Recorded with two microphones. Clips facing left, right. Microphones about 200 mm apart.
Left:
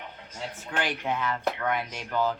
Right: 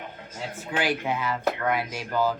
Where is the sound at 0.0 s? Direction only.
50° right (ahead or behind).